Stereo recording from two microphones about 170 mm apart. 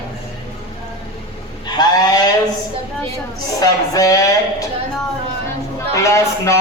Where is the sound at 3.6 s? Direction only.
20° left (ahead or behind).